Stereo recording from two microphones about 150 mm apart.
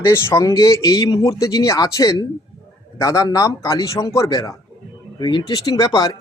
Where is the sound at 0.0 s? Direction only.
15° left (ahead or behind).